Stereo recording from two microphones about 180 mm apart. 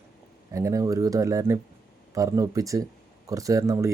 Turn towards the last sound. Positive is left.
turn(degrees=-15)  # may be behind; listen again after turning